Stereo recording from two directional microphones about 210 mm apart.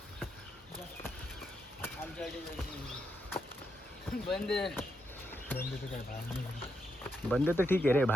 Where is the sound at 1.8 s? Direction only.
5° left (ahead or behind).